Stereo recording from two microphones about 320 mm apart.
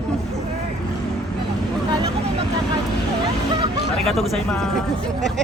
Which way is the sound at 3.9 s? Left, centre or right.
Centre.